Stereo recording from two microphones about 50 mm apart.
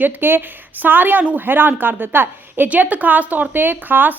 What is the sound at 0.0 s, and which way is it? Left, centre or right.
A woman's voice, right.